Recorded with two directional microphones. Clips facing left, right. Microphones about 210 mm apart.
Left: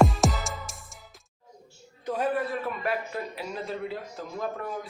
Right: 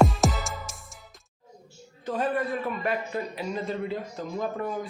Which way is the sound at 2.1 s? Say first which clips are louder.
Even; 10° left (ahead or behind).